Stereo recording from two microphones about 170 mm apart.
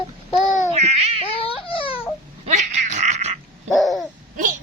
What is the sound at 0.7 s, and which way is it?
Baby cry, 40° right (ahead or behind).